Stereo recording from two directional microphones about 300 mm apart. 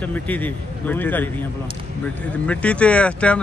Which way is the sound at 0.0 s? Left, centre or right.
Centre.